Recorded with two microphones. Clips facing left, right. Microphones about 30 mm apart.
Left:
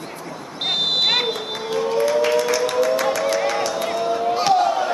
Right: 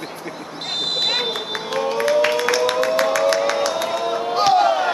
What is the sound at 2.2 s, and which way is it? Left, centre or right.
Music, right.